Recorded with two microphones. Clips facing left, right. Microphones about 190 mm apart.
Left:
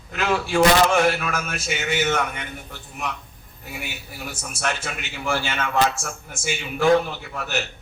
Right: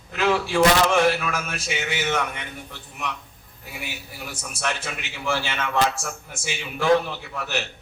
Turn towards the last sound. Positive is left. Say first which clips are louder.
# left 1 dB
turn(degrees=45)  # may be behind; listen again after turning